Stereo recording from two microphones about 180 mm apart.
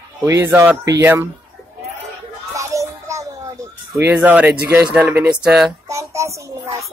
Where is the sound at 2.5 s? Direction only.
15° right (ahead or behind).